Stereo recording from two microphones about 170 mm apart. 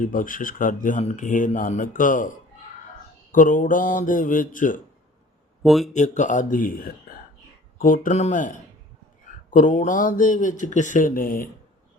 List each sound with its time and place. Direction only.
0.0 s speech: 50° left (ahead or behind)
3.3 s speech: 50° left (ahead or behind)
5.6 s speech: centre (ahead or behind)
5.9 s speech: 45° left (ahead or behind)